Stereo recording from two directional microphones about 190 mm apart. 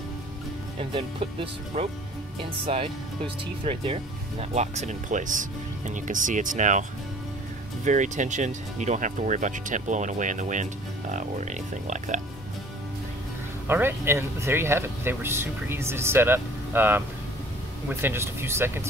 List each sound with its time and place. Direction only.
0.7 s speech: 30° right (ahead or behind)
13.7 s speech: 10° right (ahead or behind)